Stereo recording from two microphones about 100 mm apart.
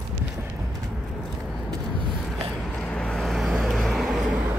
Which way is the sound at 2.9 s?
10° left (ahead or behind).